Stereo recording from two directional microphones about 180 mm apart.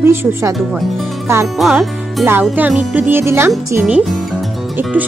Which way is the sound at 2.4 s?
5° right (ahead or behind).